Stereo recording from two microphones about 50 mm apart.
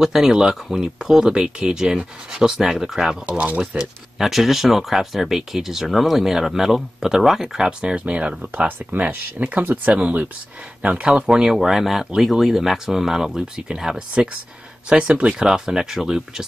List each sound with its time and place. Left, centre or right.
0.0 s speech: centre
3.3 s speech: right
3.7 s speech: centre
11.5 s speech: centre